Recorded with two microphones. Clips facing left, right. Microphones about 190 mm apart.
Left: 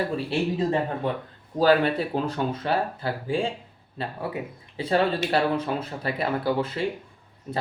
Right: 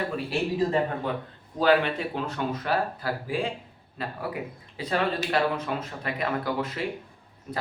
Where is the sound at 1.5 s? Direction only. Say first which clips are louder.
Left 2 dB; 35° left (ahead or behind).